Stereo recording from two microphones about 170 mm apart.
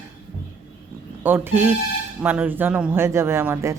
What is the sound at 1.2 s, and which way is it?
Speech, 10° right (ahead or behind).